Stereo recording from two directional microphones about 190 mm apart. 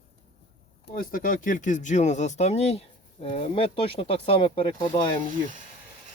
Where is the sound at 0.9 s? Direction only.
45° left (ahead or behind); by 5.1 s 25° left (ahead or behind).